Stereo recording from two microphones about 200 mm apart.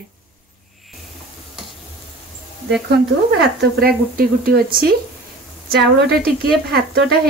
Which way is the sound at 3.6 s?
50° right (ahead or behind).